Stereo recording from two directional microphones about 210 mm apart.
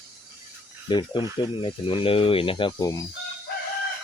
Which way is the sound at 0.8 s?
20° left (ahead or behind).